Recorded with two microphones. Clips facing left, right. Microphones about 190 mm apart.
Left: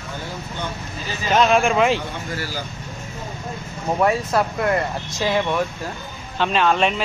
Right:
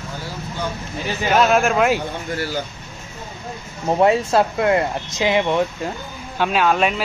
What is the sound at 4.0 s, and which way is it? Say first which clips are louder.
Speech: right 4 dB; 25° right (ahead or behind).